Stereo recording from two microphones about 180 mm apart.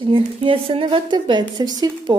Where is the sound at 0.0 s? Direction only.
30° right (ahead or behind).